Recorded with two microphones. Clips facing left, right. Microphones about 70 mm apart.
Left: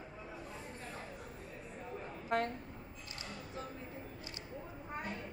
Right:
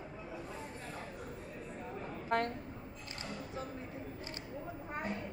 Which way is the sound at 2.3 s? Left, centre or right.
Right.